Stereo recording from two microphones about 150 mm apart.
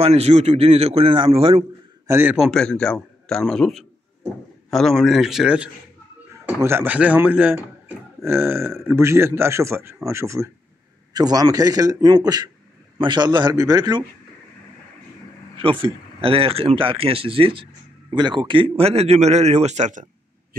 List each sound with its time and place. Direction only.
0.0 s speech: 45° right (ahead or behind)
2.0 s a man's voice: 15° right (ahead or behind)
2.3 s a man's voice: centre (ahead or behind)
6.4 s a man's voice: 15° right (ahead or behind)
15.5 s a man's voice: 35° right (ahead or behind); by 20.1 s 55° right (ahead or behind)